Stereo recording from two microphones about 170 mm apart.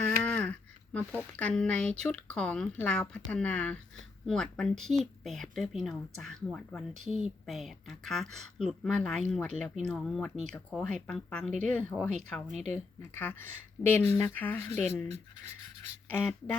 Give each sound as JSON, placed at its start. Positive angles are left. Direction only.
{"t": 0.2, "sound": "a woman's voice", "side_deg": 5}
{"t": 16.0, "sound": "speech", "side_deg": 10}